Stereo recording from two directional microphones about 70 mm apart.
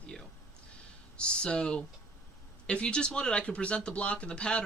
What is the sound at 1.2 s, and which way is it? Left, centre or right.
Speech, centre.